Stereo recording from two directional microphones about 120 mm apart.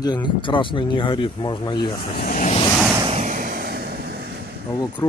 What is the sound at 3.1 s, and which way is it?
Vehicle, 85° right.